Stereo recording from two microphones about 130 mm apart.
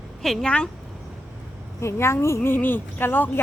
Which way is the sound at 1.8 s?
20° left (ahead or behind).